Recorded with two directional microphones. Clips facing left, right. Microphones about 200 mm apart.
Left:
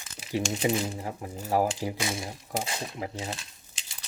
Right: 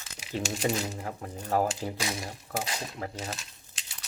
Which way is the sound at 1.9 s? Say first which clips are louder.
Left 2 dB; 25° left (ahead or behind).